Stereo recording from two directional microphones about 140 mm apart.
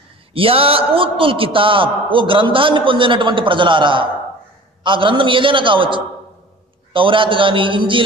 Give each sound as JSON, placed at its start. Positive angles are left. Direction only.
{"t": 0.3, "sound": "a man's voice", "side_deg": -40}